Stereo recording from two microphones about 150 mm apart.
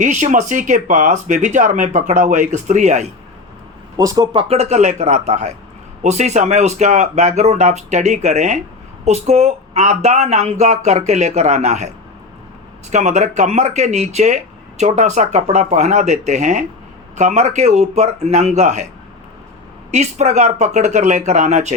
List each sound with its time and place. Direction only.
0.0 s speech: 55° right (ahead or behind)
3.9 s speech: 25° right (ahead or behind); by 11.9 s 50° right (ahead or behind)
12.9 s speech: 50° right (ahead or behind)
19.9 s speech: 50° right (ahead or behind)